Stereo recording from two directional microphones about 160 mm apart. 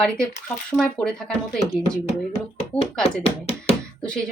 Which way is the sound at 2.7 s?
5° left (ahead or behind).